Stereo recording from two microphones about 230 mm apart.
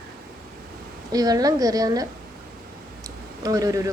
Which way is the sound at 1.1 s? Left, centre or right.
Centre.